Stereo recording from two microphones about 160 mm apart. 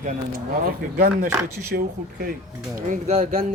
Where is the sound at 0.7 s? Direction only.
70° right (ahead or behind).